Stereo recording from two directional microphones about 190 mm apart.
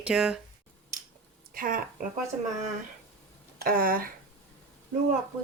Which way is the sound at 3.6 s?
50° right (ahead or behind).